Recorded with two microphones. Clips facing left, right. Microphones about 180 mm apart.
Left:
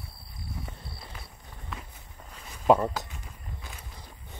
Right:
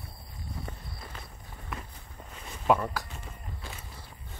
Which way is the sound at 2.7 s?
25° left (ahead or behind).